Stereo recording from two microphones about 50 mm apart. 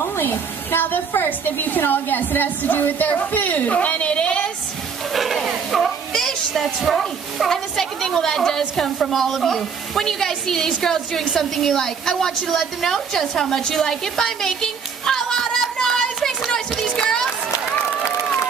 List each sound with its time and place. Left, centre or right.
0.0 s a woman's voice: left
5.1 s speech: centre
5.7 s music: centre
6.9 s a woman's voice: centre
16.4 s a sound: centre